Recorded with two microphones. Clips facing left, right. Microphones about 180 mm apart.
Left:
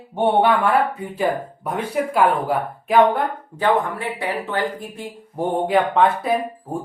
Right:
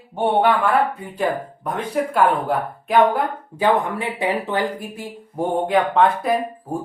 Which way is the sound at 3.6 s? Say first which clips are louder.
Right 1 dB; 20° right (ahead or behind).